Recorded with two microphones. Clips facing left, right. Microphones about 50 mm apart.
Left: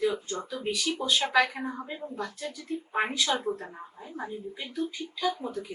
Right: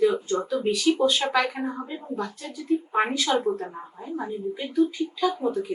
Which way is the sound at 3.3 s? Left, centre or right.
Right.